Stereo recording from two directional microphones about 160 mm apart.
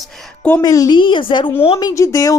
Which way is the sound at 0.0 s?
10° left (ahead or behind).